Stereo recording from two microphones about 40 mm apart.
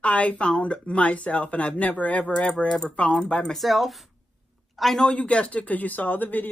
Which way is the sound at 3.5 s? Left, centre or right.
Centre.